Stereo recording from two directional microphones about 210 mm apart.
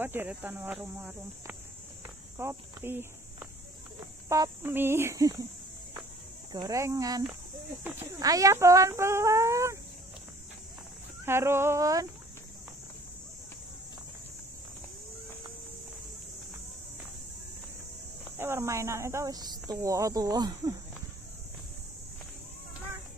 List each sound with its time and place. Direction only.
0.0 s speech: 10° right (ahead or behind)
2.3 s cricket: 10° right (ahead or behind)
4.3 s speech: 15° right (ahead or behind)
6.5 s speech: 15° right (ahead or behind)
11.2 s speech: 10° right (ahead or behind)
18.4 s speech: 10° right (ahead or behind)